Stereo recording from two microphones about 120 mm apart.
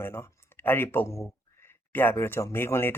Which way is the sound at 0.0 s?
20° left (ahead or behind).